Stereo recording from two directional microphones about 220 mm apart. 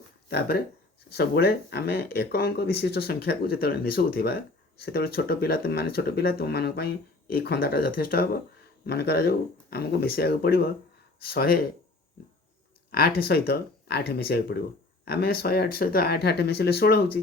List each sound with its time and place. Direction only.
0.3 s speech: 45° left (ahead or behind)
12.9 s speech: 45° left (ahead or behind)